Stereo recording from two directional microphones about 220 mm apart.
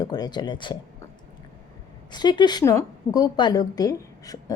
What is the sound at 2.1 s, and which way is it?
A woman's voice, 20° left (ahead or behind).